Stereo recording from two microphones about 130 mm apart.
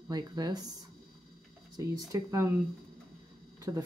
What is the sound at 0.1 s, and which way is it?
Speech, 30° right (ahead or behind).